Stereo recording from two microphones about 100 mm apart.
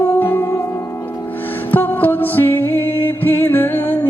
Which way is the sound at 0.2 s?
20° left (ahead or behind).